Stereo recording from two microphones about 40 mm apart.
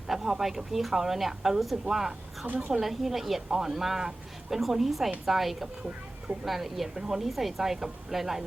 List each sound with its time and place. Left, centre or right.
0.1 s speech: centre